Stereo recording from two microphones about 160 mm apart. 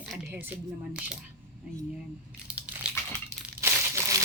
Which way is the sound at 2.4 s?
10° right (ahead or behind).